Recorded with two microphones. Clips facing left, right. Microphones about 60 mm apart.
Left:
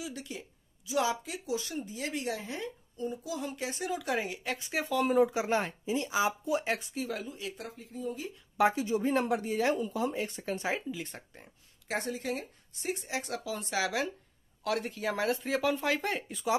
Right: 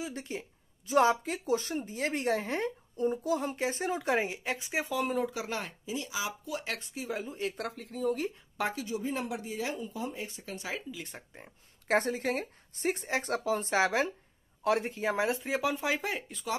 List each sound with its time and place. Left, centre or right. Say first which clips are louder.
0.0 s a woman's voice: right 3 dB; right; by 4.9 s centre
4.9 s speech: left 5 dB; centre
5.2 s speech: left 7 dB; left
6.4 s speech: left 6 dB; left
6.8 s speech: left 4 dB; centre
7.2 s a woman's voice: right 5 dB; right
7.5 s speech: right 4 dB; right
8.6 s speech: left 7 dB; centre
8.9 s speech: left 6 dB; left
10.5 s speech: left 6 dB; left
11.0 s speech: left 2 dB; centre
11.9 s a woman's voice: right 5 dB; right; by 16.4 s centre